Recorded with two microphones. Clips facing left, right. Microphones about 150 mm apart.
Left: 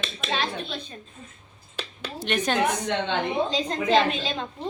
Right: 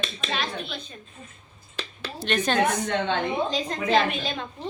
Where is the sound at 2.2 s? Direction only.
10° left (ahead or behind).